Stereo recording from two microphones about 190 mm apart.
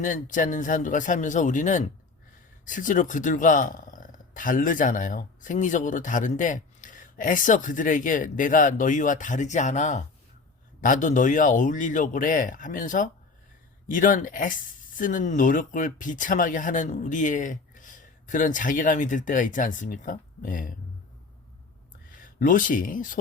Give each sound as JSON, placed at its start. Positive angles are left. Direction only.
{"t": 0.0, "sound": "speech", "side_deg": 45}
{"t": 22.2, "sound": "speech", "side_deg": 45}